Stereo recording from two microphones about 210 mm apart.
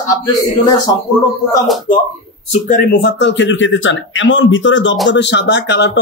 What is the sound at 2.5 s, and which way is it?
Speech, 40° left (ahead or behind).